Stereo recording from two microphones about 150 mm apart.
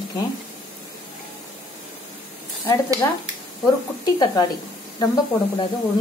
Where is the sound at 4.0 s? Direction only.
25° left (ahead or behind).